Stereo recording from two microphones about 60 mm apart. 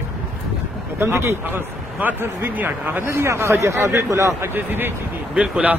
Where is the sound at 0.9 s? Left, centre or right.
Right.